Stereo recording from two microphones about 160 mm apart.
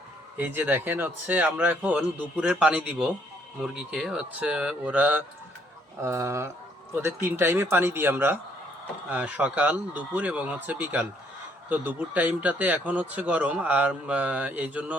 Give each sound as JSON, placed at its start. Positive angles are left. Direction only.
{"t": 0.3, "sound": "speech", "side_deg": -10}